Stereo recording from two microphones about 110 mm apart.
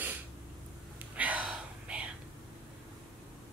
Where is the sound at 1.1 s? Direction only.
15° right (ahead or behind).